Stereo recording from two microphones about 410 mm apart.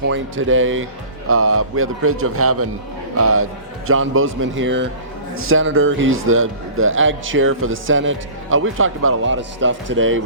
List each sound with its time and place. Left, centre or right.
0.1 s a man's voice: right